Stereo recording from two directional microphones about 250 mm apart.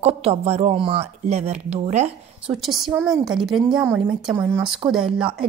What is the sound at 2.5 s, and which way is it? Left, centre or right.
A woman's voice, centre.